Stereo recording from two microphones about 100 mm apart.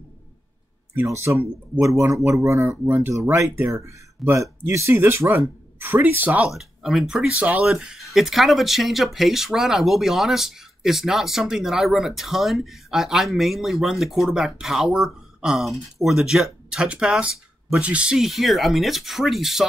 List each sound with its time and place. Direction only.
0.9 s speech: 25° right (ahead or behind)
6.5 s speech: 5° right (ahead or behind)